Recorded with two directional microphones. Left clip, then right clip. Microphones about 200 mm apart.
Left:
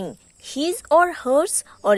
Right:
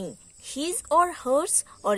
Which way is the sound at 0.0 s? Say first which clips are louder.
Left 5 dB; 20° left (ahead or behind).